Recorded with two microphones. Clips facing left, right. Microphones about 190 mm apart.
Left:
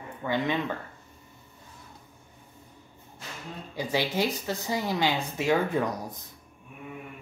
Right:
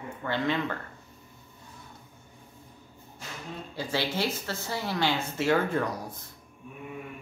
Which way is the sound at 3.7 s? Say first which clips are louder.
Left 3 dB; 15° left (ahead or behind).